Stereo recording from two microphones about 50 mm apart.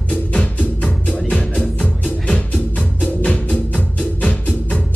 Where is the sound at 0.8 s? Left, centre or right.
Centre.